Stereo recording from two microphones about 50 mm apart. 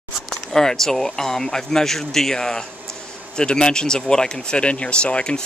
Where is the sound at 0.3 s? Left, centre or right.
Centre.